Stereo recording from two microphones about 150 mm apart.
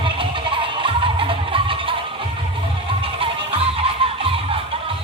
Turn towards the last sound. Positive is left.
turn(degrees=-40)  # may be behind; listen again after turning